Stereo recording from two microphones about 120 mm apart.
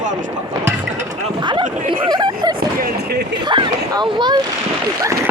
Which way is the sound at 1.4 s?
40° right (ahead or behind).